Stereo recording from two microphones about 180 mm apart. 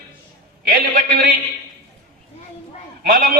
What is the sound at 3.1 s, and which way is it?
Speech, 55° right (ahead or behind).